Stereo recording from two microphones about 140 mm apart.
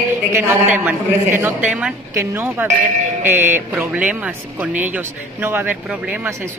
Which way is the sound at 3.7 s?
10° right (ahead or behind).